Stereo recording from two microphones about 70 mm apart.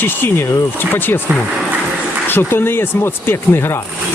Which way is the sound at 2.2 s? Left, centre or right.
Left.